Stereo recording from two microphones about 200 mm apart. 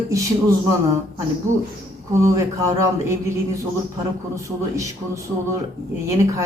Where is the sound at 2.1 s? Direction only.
15° right (ahead or behind).